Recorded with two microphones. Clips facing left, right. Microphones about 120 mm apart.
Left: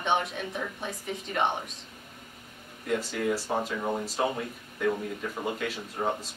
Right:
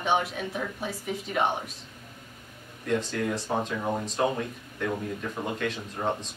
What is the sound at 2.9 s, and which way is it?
A woman's voice, 5° left (ahead or behind).